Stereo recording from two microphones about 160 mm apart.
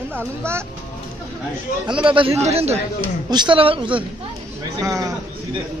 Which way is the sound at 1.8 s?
30° right (ahead or behind).